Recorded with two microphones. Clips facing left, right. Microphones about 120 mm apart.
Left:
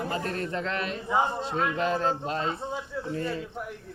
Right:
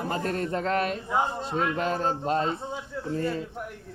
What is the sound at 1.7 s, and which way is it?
Speech, 45° right (ahead or behind).